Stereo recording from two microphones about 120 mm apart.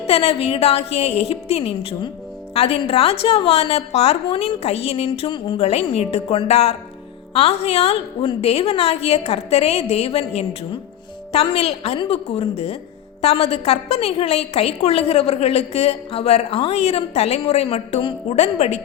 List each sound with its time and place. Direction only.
0.0 s a woman's voice: 55° left (ahead or behind)